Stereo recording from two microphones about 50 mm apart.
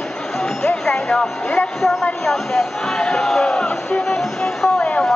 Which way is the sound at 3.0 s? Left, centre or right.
Centre.